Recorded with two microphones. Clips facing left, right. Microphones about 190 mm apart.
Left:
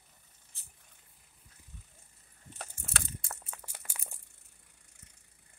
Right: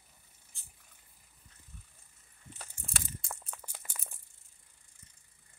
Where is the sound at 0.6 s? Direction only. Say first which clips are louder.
Even; centre (ahead or behind).